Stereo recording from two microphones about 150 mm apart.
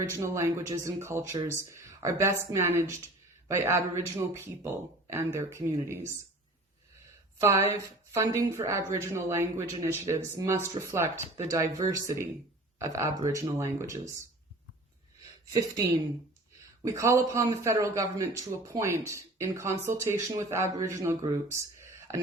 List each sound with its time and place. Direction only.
0.2 s speech: 20° right (ahead or behind)
7.3 s a man's voice: 20° right (ahead or behind)
16.8 s a man's voice: 20° right (ahead or behind)